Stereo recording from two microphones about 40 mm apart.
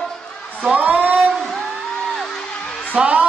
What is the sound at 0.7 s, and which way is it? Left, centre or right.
Speech, right.